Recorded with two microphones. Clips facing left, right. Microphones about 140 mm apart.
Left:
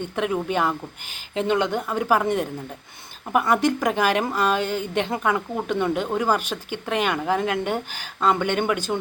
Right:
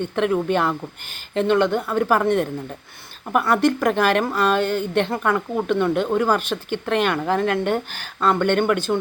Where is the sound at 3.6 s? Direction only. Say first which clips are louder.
Right 3 dB; 15° left (ahead or behind).